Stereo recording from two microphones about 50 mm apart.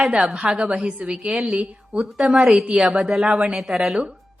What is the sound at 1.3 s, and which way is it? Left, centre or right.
A woman's voice, centre.